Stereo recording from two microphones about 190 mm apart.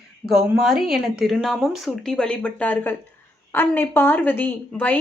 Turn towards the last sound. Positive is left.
turn(degrees=10)  # may be behind; listen again after turning